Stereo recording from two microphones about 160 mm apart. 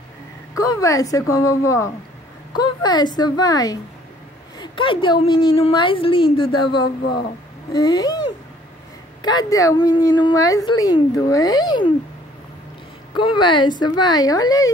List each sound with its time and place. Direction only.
0.6 s a woman's voice: 20° left (ahead or behind)
9.2 s a woman's voice: 25° left (ahead or behind)
13.1 s a woman's voice: 30° left (ahead or behind)